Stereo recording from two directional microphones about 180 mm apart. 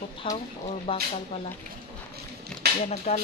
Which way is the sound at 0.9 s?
30° left (ahead or behind).